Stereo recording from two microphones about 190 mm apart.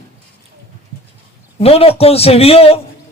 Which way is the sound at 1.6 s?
30° left (ahead or behind).